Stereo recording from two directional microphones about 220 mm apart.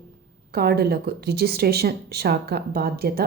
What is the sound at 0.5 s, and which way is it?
A woman's voice, 45° right (ahead or behind).